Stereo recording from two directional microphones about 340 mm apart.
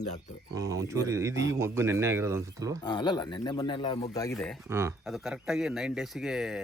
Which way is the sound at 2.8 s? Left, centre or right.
Centre.